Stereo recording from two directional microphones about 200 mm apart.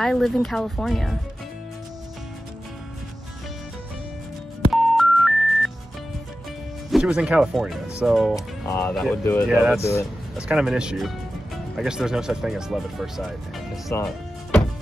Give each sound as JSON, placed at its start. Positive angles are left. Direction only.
{"t": 0.0, "sound": "speech", "side_deg": 0}
{"t": 4.7, "sound": "music", "side_deg": 0}
{"t": 6.9, "sound": "speech", "side_deg": -5}
{"t": 9.8, "sound": "speech", "side_deg": 15}
{"t": 10.3, "sound": "speech", "side_deg": -5}
{"t": 13.9, "sound": "music", "side_deg": 10}